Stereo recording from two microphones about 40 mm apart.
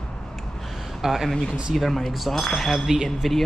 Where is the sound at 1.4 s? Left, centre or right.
Centre.